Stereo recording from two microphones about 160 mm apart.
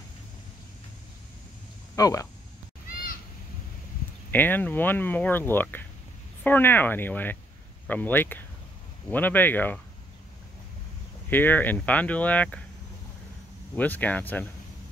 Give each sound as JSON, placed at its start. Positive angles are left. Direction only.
{"t": 2.0, "sound": "speech", "side_deg": 20}
{"t": 4.3, "sound": "speech", "side_deg": 10}
{"t": 11.2, "sound": "speech", "side_deg": 10}
{"t": 13.7, "sound": "speech", "side_deg": 10}